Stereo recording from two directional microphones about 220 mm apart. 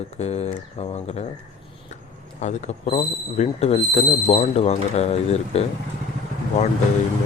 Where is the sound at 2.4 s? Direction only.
30° left (ahead or behind).